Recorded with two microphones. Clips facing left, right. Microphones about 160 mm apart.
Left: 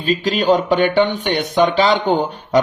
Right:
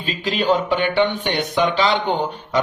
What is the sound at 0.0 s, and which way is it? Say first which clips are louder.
A man's voice: left 5 dB; 40° left (ahead or behind).